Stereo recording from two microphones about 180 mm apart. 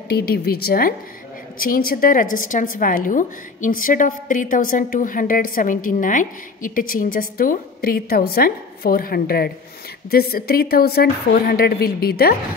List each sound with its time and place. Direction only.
0.1 s a woman's voice: 60° left (ahead or behind)